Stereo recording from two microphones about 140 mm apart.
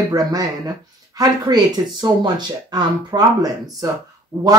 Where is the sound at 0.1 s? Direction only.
25° right (ahead or behind).